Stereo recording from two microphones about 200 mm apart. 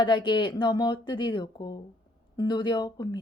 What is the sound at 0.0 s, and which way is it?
Speech, 20° left (ahead or behind).